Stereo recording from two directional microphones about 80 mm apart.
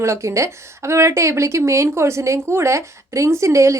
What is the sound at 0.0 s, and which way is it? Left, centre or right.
Speech, right.